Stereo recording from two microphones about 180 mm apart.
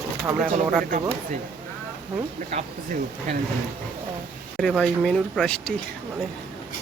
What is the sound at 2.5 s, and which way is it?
Speech, 40° right (ahead or behind).